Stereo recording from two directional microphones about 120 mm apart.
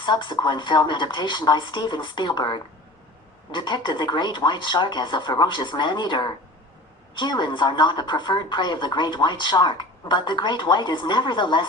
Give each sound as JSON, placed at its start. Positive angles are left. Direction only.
{"t": 0.0, "sound": "a woman's voice", "side_deg": 40}